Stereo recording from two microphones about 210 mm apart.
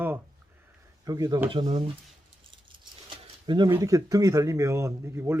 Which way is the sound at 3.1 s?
20° right (ahead or behind).